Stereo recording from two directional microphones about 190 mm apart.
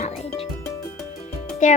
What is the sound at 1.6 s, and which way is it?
Speech, 40° left (ahead or behind).